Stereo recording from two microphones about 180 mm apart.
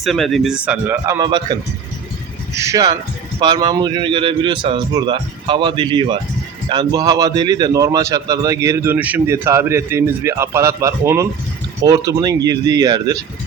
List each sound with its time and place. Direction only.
0.0 s speech: centre (ahead or behind); by 1.5 s 25° right (ahead or behind)
2.6 s a man's voice: 20° right (ahead or behind)